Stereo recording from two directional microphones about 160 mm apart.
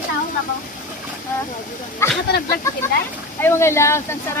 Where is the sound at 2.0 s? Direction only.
15° left (ahead or behind).